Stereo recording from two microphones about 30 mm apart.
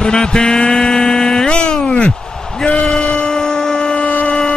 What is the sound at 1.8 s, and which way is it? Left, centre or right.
A man's voice, left.